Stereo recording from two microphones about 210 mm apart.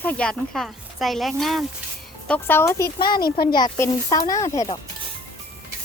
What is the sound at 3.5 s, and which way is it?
Speech, 20° left (ahead or behind).